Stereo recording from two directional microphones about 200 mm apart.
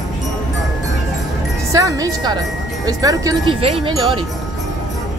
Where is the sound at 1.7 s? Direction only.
15° right (ahead or behind).